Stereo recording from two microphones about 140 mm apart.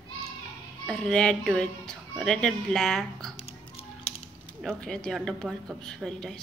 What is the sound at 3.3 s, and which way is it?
Music, 45° left (ahead or behind).